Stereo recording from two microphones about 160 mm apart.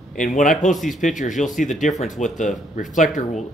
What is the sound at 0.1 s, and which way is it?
Speech, 55° left (ahead or behind).